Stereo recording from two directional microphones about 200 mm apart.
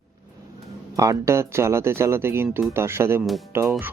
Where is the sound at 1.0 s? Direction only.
15° right (ahead or behind).